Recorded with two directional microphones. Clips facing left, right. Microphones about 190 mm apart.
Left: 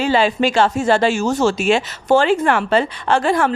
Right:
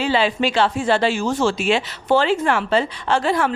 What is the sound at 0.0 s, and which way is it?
Speech, 45° left (ahead or behind).